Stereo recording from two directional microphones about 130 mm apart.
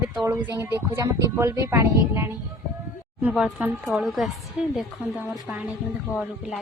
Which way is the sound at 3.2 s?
10° right (ahead or behind).